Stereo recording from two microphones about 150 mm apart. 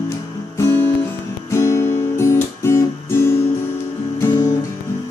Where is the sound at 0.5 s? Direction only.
15° left (ahead or behind).